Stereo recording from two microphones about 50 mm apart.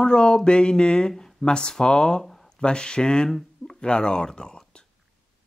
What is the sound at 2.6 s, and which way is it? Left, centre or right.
Speech, centre.